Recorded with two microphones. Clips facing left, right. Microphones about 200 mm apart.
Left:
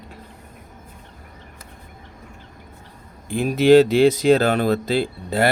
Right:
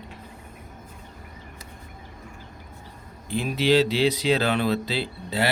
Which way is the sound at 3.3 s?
50° left (ahead or behind).